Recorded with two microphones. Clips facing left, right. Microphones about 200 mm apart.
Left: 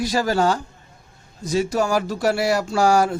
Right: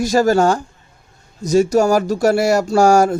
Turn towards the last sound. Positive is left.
turn(degrees=-45)  # may be behind; listen again after turning